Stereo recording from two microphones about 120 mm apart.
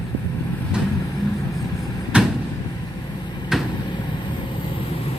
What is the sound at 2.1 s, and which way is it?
Vehicle, 10° right (ahead or behind).